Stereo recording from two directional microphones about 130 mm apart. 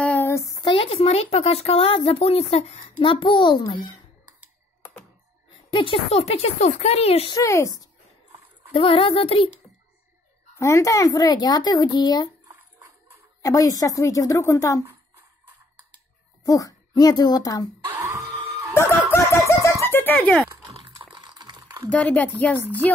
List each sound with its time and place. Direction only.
0.0 s a sound: 15° left (ahead or behind); by 0.8 s 35° left (ahead or behind)
0.8 s speech: 50° left (ahead or behind); by 4.0 s 35° left (ahead or behind)
5.5 s speech: 40° left (ahead or behind)
7.2 s a woman's voice: 25° left (ahead or behind)
8.7 s speech: 45° left (ahead or behind)
10.5 s speech: 25° left (ahead or behind)
13.4 s a woman's voice: 25° left (ahead or behind)
16.4 s speech: 25° left (ahead or behind)
17.9 s music: 20° right (ahead or behind)
18.7 s fowl: 15° left (ahead or behind)
20.7 s a sound: 40° right (ahead or behind)
21.9 s speech: 10° left (ahead or behind)